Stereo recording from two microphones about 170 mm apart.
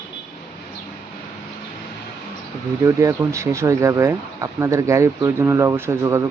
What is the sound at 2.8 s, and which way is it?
Speech, 15° right (ahead or behind).